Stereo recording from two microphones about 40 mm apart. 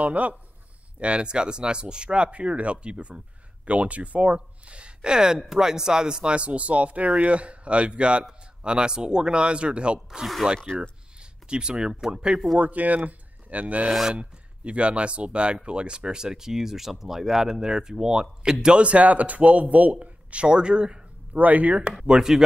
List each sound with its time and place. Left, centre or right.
0.0 s speech: right; by 6.3 s centre
6.3 s speech: right
12.5 s speech: right; by 18.8 s centre
18.8 s speech: right
21.4 s speech: right
22.3 s speech: centre